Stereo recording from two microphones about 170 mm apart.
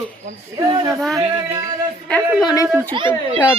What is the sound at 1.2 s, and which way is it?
Speech, 40° right (ahead or behind).